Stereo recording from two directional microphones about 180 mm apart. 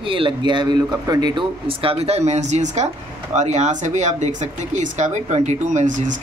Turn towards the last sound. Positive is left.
turn(degrees=-45)  # may be behind; listen again after turning